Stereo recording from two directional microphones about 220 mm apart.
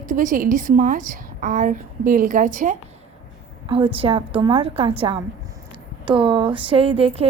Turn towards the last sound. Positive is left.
turn(degrees=-25)  # may be behind; listen again after turning